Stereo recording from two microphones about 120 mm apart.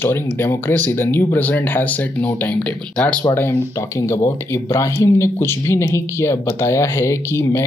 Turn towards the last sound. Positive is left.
turn(degrees=25)  # may be behind; listen again after turning